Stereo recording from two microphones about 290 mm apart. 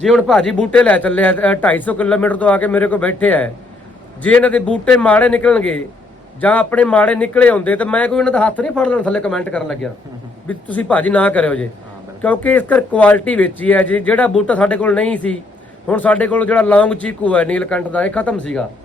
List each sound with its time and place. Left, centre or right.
0.0 s speech: centre